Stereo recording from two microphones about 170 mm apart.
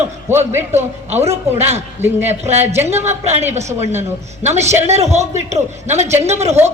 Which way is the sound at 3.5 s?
40° right (ahead or behind).